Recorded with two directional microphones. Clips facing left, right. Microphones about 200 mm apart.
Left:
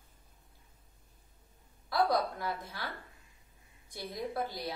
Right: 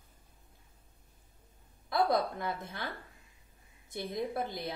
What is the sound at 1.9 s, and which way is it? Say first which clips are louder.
Speech: right 1 dB; 20° right (ahead or behind).